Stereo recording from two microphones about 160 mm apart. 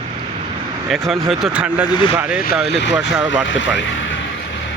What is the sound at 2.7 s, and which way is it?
Speech, 90° left.